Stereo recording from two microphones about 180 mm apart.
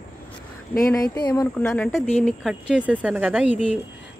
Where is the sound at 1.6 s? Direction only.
5° left (ahead or behind).